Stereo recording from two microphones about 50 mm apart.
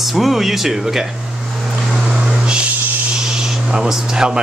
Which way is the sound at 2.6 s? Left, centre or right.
Right.